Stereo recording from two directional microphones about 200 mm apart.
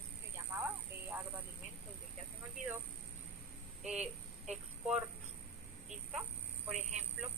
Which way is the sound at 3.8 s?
5° right (ahead or behind).